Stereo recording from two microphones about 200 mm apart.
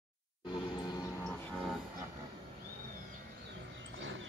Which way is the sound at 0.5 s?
20° left (ahead or behind).